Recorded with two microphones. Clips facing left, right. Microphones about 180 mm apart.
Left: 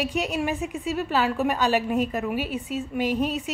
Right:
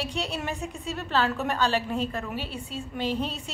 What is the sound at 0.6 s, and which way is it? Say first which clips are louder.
Speech: left 5 dB; 35° right (ahead or behind).